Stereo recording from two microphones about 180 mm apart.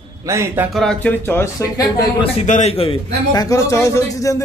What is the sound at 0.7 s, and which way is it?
Speech, 5° left (ahead or behind).